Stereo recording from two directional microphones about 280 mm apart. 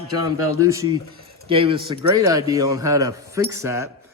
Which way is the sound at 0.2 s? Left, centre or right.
Centre.